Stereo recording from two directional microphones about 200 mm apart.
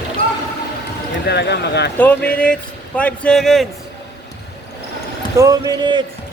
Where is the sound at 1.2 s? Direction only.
55° left (ahead or behind).